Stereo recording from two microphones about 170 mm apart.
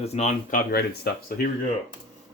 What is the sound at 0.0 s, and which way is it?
Speech, 40° left (ahead or behind).